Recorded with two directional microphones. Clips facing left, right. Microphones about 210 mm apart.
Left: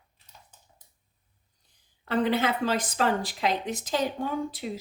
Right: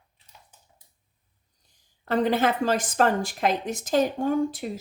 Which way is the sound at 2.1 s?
45° right (ahead or behind).